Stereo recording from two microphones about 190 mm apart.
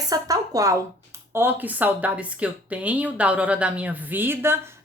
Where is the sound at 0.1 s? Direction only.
20° right (ahead or behind).